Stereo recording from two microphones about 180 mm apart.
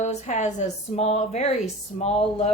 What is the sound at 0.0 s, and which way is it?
A woman's voice, 40° left (ahead or behind).